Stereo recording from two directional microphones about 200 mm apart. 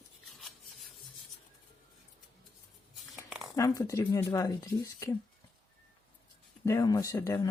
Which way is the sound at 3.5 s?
15° left (ahead or behind).